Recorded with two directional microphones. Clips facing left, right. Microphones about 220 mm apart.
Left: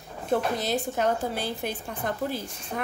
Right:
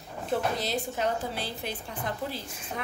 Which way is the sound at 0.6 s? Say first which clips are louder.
Left 4 dB; 50° left (ahead or behind).